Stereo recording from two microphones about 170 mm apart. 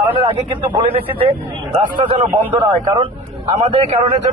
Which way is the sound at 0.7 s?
30° right (ahead or behind).